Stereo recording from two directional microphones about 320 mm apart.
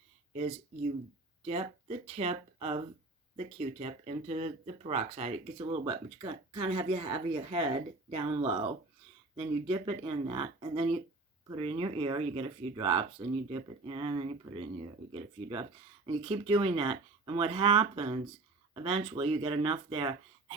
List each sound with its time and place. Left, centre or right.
1.5 s speech: centre